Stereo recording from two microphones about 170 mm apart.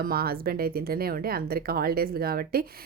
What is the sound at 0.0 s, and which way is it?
Speech, 60° right (ahead or behind).